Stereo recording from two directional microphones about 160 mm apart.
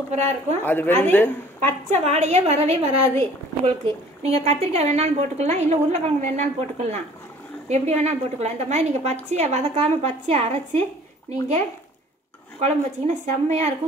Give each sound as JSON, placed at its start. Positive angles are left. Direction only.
{"t": 0.1, "sound": "a woman's voice", "side_deg": -45}
{"t": 0.7, "sound": "a woman's voice", "side_deg": 10}
{"t": 1.9, "sound": "a woman's voice", "side_deg": -45}